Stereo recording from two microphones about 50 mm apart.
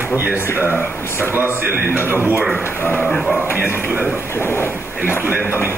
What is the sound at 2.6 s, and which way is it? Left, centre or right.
Speech, left.